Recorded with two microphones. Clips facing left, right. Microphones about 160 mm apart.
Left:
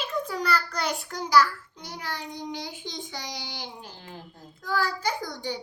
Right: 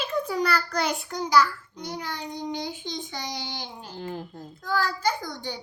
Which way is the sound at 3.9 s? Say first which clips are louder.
Right 10 dB; 50° right (ahead or behind).